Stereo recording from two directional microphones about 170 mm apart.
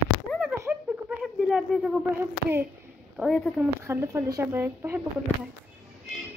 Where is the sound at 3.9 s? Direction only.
15° right (ahead or behind).